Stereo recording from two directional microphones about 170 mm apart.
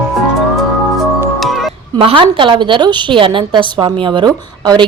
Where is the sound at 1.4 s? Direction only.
Centre (ahead or behind).